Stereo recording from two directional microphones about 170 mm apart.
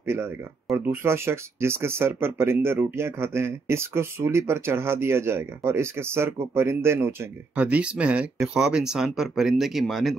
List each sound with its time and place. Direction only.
0.0 s speech: 15° right (ahead or behind)